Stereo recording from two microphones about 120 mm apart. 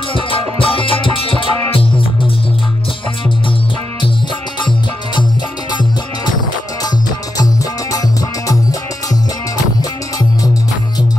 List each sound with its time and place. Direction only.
0.1 s music: 50° left (ahead or behind)
7.9 s music: 30° left (ahead or behind)